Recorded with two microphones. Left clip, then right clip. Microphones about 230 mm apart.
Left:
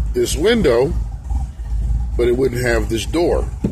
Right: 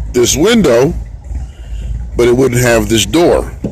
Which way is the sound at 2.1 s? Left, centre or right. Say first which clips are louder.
Right 7 dB; right.